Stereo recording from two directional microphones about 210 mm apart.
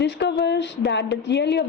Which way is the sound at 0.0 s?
55° left (ahead or behind).